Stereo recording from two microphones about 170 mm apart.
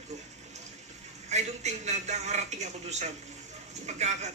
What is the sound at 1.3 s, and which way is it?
Speech, 40° right (ahead or behind).